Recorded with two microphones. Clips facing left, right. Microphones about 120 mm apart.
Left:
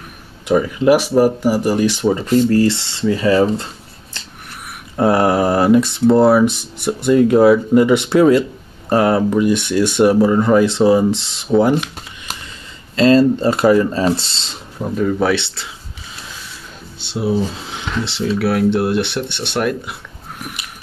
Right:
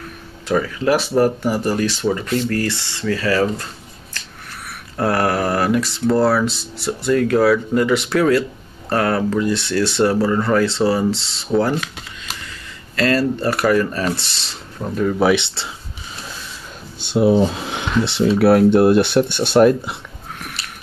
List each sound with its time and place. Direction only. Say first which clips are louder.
0.5 s speech: left 5 dB; 15° left (ahead or behind)
4.1 s finger snapping: even; 25° left (ahead or behind)
4.9 s speech: left 4 dB; 20° left (ahead or behind)
12.9 s speech: left 6 dB; 25° left (ahead or behind)
14.8 s speech: left 1 dB; centre (ahead or behind)
17.0 s speech: right 4 dB; 55° right (ahead or behind)
18.4 s speech: right 5 dB; 40° right (ahead or behind)
20.3 s a sound: left 3 dB; 10° left (ahead or behind)